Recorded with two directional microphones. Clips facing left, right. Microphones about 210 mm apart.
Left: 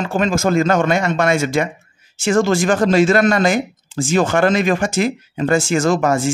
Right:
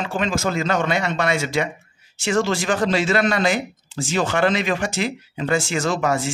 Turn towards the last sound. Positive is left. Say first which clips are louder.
# left 5 dB
turn(degrees=45)  # may be behind; listen again after turning